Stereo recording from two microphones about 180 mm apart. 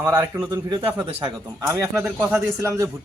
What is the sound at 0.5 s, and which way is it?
Speech, 25° right (ahead or behind).